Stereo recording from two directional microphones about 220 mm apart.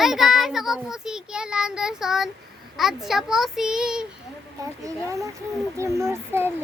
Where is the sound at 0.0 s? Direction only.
Centre (ahead or behind).